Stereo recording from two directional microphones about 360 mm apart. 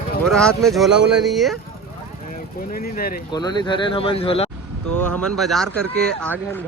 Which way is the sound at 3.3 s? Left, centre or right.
Centre.